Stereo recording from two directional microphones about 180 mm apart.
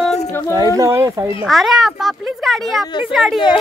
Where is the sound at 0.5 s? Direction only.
20° right (ahead or behind).